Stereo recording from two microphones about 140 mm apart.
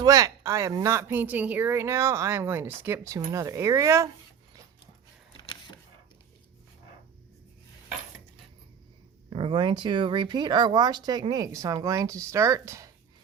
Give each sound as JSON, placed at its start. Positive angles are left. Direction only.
{"t": 0.0, "sound": "speech", "side_deg": -25}
{"t": 9.3, "sound": "speech", "side_deg": -40}